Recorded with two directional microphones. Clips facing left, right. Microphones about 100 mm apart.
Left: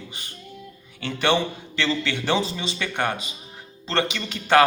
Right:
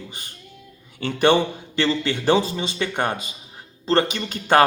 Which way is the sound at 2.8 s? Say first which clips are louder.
Right 2 dB; 15° right (ahead or behind).